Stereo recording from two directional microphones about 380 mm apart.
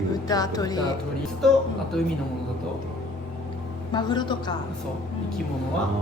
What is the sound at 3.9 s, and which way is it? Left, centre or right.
Speech, centre.